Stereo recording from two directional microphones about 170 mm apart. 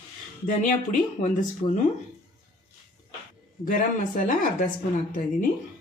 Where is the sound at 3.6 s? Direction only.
50° left (ahead or behind).